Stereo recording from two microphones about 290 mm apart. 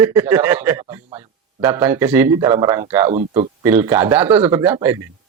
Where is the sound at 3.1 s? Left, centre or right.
Right.